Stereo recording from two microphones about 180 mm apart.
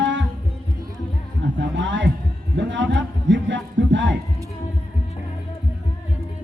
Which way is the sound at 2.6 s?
80° right.